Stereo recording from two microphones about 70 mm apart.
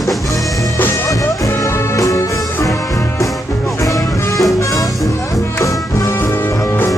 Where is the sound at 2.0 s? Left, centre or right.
Left.